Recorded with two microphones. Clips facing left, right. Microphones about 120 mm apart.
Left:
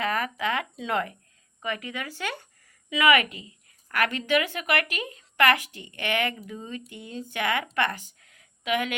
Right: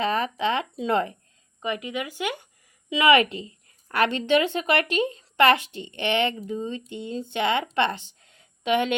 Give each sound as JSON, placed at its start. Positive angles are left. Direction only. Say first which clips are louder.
{"t": 0.0, "sound": "a woman's voice", "louder": "right 3 dB", "side_deg": -25}
{"t": 1.6, "sound": "speech", "louder": "right 4 dB", "side_deg": -20}
{"t": 3.0, "sound": "a woman's voice", "louder": "right 3 dB", "side_deg": -30}